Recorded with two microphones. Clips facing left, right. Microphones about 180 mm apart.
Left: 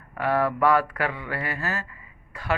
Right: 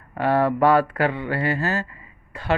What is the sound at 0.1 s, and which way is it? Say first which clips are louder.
Speech: right 4 dB; 30° right (ahead or behind).